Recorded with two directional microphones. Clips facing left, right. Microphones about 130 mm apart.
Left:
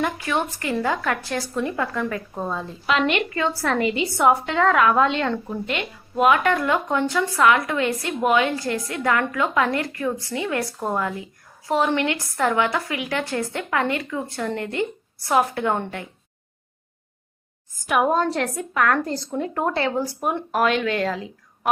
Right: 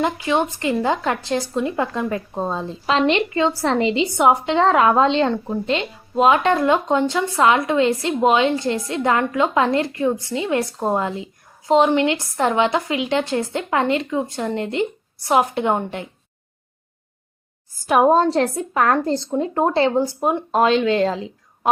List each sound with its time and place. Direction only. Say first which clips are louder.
0.0 s speech: right 4 dB; 20° right (ahead or behind)
17.8 s speech: right 5 dB; 30° right (ahead or behind)